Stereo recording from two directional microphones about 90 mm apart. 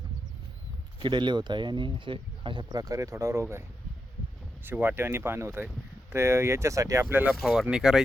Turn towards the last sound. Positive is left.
turn(degrees=-10)  # may be behind; listen again after turning